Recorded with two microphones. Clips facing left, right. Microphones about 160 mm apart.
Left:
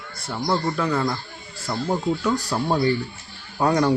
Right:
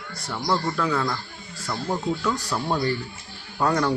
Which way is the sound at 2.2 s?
25° left (ahead or behind).